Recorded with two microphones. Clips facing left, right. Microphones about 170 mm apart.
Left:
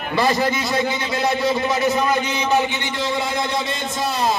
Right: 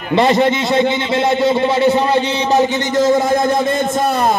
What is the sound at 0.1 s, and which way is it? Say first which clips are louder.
A man's voice: right 7 dB; 25° right (ahead or behind).